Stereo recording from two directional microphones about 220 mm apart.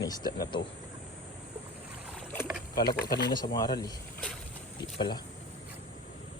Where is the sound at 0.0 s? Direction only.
15° left (ahead or behind).